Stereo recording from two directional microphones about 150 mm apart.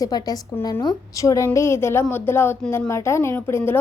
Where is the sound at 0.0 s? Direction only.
25° left (ahead or behind).